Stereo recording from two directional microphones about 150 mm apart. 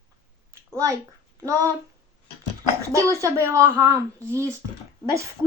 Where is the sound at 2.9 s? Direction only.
20° right (ahead or behind).